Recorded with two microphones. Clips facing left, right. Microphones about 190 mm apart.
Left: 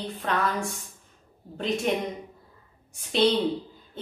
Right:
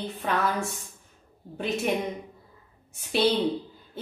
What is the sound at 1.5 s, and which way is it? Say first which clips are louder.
Speech: left 1 dB; 5° right (ahead or behind).